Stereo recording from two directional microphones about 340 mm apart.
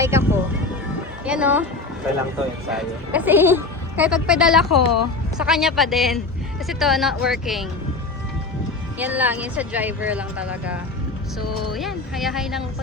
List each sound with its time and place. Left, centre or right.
0.0 s speech: centre
2.6 s speech: centre
4.8 s speech: left
5.4 s speech: centre
9.0 s speech: centre